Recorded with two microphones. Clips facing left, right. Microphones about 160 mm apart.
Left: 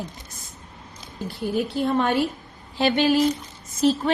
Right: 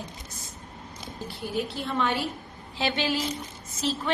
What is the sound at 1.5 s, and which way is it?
A woman's voice, 45° left (ahead or behind).